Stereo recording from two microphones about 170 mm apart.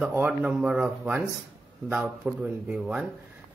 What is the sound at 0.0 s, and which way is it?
Speech, 10° right (ahead or behind).